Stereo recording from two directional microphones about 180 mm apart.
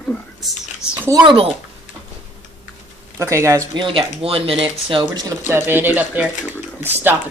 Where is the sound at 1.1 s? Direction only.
25° right (ahead or behind).